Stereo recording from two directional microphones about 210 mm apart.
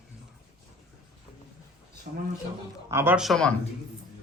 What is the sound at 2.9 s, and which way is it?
Speech, 10° right (ahead or behind).